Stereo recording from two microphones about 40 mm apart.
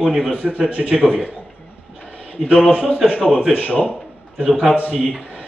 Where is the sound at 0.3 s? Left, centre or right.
Right.